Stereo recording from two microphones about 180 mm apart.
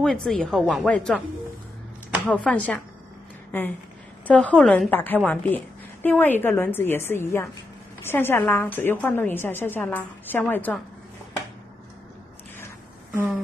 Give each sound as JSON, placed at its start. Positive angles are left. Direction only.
{"t": 0.0, "sound": "a woman's voice", "side_deg": 0}
{"t": 2.2, "sound": "a woman's voice", "side_deg": 5}
{"t": 4.3, "sound": "a woman's voice", "side_deg": 5}